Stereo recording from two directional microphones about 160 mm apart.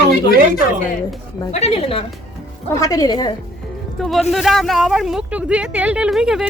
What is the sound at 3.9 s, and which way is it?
Speech, centre (ahead or behind).